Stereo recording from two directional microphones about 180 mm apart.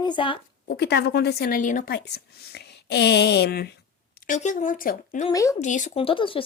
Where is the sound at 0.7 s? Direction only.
65° left (ahead or behind); by 2.0 s 50° left (ahead or behind).